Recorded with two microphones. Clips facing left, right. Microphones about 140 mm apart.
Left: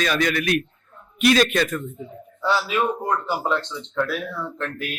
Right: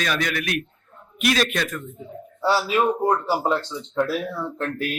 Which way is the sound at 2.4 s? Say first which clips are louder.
Right 2 dB; 35° right (ahead or behind).